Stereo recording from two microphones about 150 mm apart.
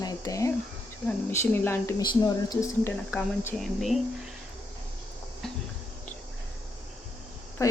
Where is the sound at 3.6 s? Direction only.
Centre (ahead or behind).